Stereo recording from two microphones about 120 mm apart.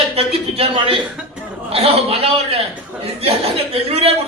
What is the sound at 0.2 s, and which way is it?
Speech, 55° right (ahead or behind).